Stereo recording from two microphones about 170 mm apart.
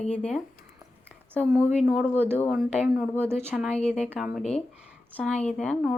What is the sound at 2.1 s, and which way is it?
Speech, 10° right (ahead or behind).